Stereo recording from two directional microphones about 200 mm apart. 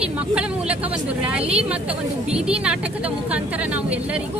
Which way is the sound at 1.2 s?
5° right (ahead or behind).